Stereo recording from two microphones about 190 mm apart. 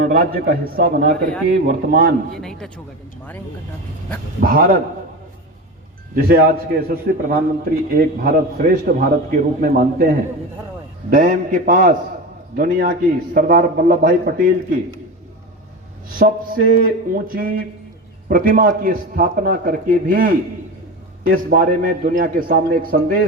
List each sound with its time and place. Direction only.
0.1 s a man's voice: 50° right (ahead or behind)
2.3 s a man's voice: centre (ahead or behind)
4.4 s a man's voice: 50° right (ahead or behind)
6.1 s a man's voice: 50° right (ahead or behind)
11.1 s a man's voice: 45° right (ahead or behind)
16.1 s a man's voice: 50° right (ahead or behind)
21.5 s a man's voice: 45° right (ahead or behind)